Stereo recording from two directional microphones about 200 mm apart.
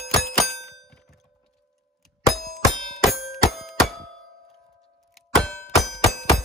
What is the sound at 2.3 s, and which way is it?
Music, centre (ahead or behind).